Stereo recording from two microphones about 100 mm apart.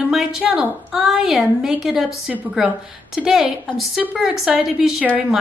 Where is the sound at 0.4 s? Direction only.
10° right (ahead or behind).